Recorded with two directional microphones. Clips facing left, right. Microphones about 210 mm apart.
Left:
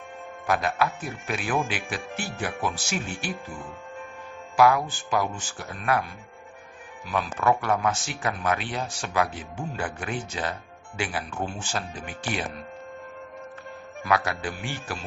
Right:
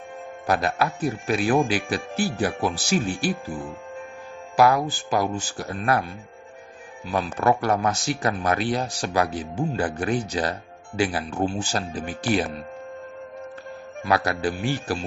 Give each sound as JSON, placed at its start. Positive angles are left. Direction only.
{"t": 0.5, "sound": "speech", "side_deg": -35}
{"t": 7.1, "sound": "speech", "side_deg": -35}
{"t": 14.0, "sound": "speech", "side_deg": -35}